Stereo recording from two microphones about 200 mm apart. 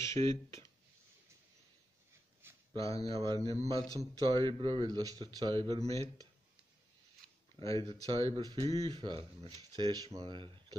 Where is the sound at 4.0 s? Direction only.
20° right (ahead or behind).